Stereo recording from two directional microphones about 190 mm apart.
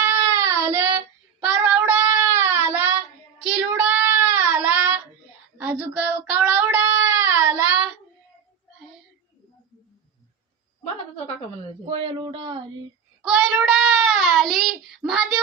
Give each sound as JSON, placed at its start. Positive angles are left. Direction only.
{"t": 0.0, "sound": "child singing", "side_deg": -15}
{"t": 11.9, "sound": "speech", "side_deg": -30}
{"t": 13.3, "sound": "child singing", "side_deg": -5}